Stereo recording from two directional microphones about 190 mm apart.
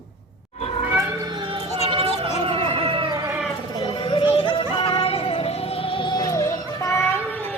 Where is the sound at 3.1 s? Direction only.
10° right (ahead or behind).